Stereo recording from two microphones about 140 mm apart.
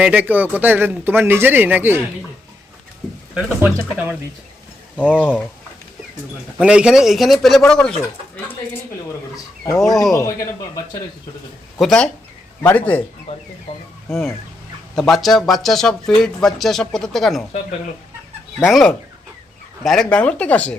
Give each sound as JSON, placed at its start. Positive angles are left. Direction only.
{"t": 0.0, "sound": "speech", "side_deg": -10}
{"t": 3.3, "sound": "speech", "side_deg": -10}
{"t": 6.6, "sound": "speech", "side_deg": -5}
{"t": 9.3, "sound": "chicken", "side_deg": 25}
{"t": 9.9, "sound": "speech", "side_deg": 0}
{"t": 11.8, "sound": "speech", "side_deg": 5}
{"t": 13.7, "sound": "speech", "side_deg": 35}
{"t": 14.1, "sound": "speech", "side_deg": 0}
{"t": 18.6, "sound": "speech", "side_deg": 0}